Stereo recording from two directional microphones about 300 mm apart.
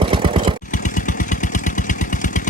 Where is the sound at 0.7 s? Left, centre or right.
Left.